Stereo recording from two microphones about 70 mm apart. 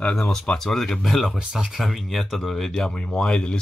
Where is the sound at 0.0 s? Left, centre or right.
Centre.